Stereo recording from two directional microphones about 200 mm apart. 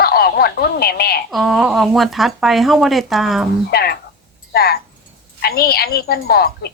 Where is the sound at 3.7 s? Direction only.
50° left (ahead or behind).